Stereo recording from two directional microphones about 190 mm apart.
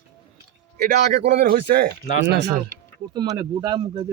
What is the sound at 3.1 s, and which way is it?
Speech, 20° right (ahead or behind).